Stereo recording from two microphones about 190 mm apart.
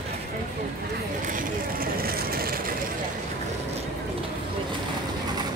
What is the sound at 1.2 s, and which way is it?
Vehicle, 45° right (ahead or behind).